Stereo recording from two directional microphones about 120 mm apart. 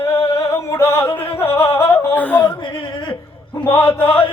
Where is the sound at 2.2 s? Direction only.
10° left (ahead or behind).